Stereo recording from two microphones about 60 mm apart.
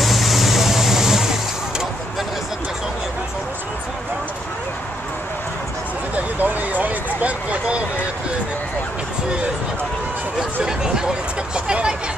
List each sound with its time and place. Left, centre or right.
0.0 s vehicle: centre
6.1 s vehicle: right
10.6 s vehicle: centre